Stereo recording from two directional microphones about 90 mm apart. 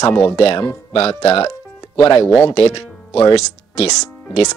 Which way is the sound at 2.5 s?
90° left.